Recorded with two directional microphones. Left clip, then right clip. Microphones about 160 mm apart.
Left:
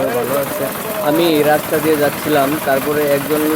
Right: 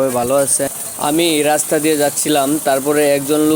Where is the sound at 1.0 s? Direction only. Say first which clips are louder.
Left 1 dB; 40° right (ahead or behind).